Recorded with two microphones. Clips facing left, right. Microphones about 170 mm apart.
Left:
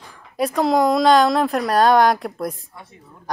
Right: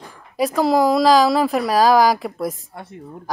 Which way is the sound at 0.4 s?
Centre (ahead or behind).